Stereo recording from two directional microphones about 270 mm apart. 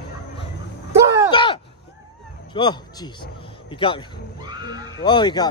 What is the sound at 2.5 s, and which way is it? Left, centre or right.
Speech, centre.